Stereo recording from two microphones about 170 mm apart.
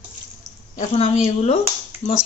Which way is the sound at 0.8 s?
40° left (ahead or behind).